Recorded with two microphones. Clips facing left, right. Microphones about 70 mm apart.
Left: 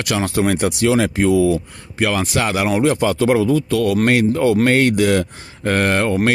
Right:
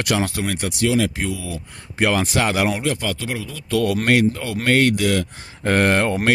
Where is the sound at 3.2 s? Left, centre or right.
Left.